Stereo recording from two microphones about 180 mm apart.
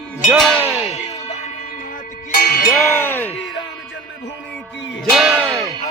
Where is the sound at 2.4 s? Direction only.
55° left (ahead or behind).